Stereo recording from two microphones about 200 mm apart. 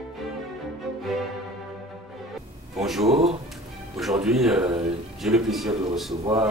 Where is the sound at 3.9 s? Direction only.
Centre (ahead or behind).